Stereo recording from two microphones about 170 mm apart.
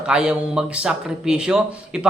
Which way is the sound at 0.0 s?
5° right (ahead or behind).